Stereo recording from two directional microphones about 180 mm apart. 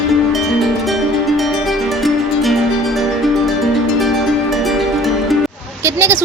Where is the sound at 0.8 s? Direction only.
Centre (ahead or behind).